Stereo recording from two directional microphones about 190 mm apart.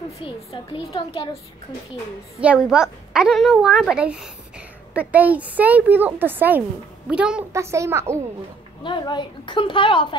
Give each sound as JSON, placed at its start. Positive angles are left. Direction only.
{"t": 0.2, "sound": "a child's voice", "side_deg": 30}
{"t": 2.4, "sound": "a woman's voice", "side_deg": -5}
{"t": 8.8, "sound": "a child's voice", "side_deg": 25}